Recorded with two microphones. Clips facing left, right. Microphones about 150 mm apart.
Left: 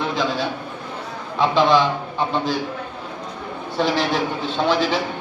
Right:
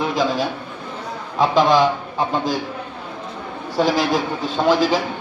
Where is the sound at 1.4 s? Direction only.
40° right (ahead or behind).